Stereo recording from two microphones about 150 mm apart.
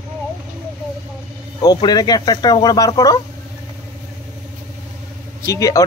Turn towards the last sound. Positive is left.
turn(degrees=20)  # may be behind; listen again after turning